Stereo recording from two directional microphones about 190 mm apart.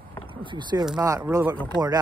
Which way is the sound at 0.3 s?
25° right (ahead or behind).